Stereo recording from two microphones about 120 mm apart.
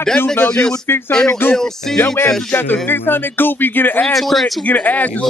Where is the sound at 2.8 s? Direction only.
15° left (ahead or behind).